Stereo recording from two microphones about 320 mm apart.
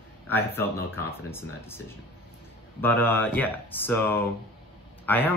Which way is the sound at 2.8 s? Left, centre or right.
Centre.